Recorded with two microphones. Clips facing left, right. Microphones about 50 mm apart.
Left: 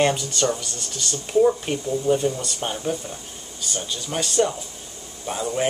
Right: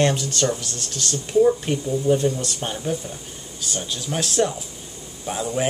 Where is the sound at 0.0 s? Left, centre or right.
Centre.